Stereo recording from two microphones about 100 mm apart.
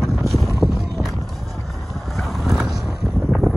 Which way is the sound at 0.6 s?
Centre (ahead or behind).